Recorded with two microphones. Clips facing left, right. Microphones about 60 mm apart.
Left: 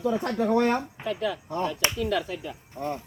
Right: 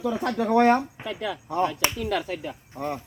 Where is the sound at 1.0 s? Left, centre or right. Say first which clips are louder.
Left 3 dB; centre.